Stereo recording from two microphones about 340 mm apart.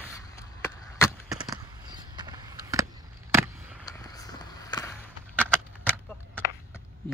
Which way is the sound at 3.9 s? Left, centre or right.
Centre.